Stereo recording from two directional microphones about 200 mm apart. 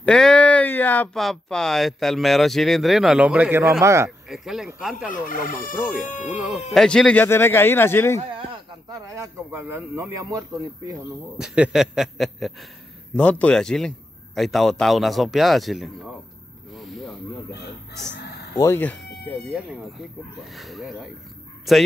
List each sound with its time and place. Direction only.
0.0 s speech: 5° left (ahead or behind); by 4.1 s 15° right (ahead or behind)
4.3 s a man's voice: centre (ahead or behind)
5.0 s speech: 40° left (ahead or behind)
6.3 s a man's voice: centre (ahead or behind)
8.2 s a man's voice: 25° right (ahead or behind); by 15.9 s centre (ahead or behind)
16.7 s snake: centre (ahead or behind)
18.6 s speech: 10° left (ahead or behind)
20.3 s a man's voice: centre (ahead or behind)